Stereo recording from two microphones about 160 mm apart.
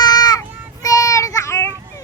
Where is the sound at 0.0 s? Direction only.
25° left (ahead or behind).